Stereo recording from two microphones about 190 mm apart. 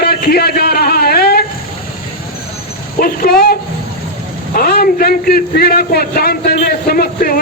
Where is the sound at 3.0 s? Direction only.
55° left (ahead or behind).